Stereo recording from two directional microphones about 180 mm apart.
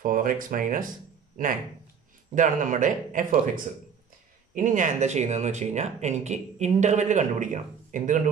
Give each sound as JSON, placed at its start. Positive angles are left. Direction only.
{"t": 0.0, "sound": "speech", "side_deg": -50}
{"t": 4.6, "sound": "speech", "side_deg": -45}